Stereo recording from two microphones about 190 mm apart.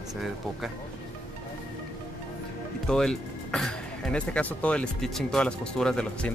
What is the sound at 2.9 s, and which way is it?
Speech, 5° left (ahead or behind).